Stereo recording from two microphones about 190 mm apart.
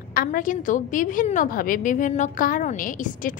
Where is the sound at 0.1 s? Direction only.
50° left (ahead or behind).